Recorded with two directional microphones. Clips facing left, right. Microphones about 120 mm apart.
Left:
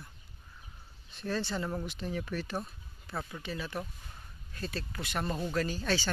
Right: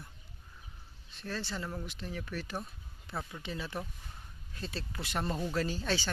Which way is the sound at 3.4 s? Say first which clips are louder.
Left 1 dB; 20° right (ahead or behind).